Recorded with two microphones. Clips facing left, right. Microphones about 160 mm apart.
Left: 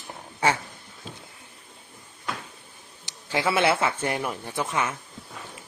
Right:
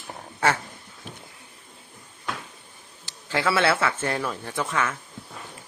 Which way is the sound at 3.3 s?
15° left (ahead or behind).